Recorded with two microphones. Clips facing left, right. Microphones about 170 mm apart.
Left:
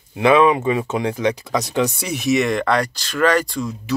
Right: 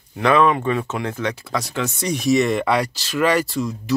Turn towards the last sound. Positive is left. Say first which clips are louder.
# right 1 dB
turn(degrees=0)  # may be behind; listen again after turning